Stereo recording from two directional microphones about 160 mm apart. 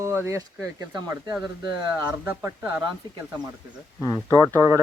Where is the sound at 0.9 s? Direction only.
20° right (ahead or behind).